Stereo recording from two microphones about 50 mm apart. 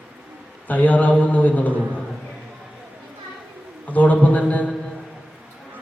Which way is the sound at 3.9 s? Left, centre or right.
Left.